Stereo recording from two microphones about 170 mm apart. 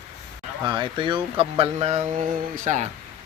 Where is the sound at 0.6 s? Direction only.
30° right (ahead or behind); by 2.9 s 45° right (ahead or behind).